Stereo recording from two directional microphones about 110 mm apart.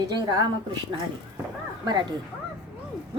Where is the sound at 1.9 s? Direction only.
40° right (ahead or behind).